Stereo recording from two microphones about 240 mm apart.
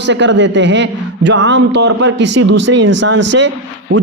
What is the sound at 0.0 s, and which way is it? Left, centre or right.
A man's voice, right.